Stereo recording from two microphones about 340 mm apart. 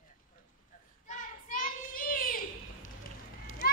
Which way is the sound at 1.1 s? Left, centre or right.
Left.